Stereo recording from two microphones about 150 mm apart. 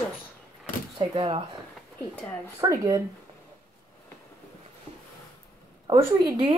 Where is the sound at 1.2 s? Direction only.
40° right (ahead or behind).